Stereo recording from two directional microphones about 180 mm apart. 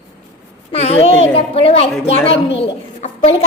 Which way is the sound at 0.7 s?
35° left (ahead or behind).